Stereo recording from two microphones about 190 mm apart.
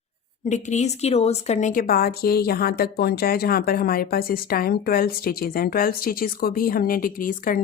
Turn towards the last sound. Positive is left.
turn(degrees=45)  # may be behind; listen again after turning